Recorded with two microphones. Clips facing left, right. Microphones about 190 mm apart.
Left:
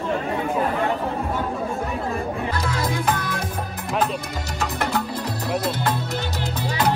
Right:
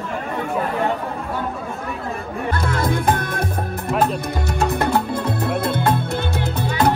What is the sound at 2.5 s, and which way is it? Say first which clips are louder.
Music: right 4 dB; 55° right (ahead or behind).